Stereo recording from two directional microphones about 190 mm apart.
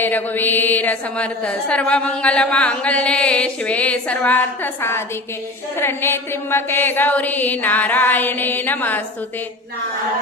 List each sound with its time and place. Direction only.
0.0 s a woman's voice: 10° left (ahead or behind)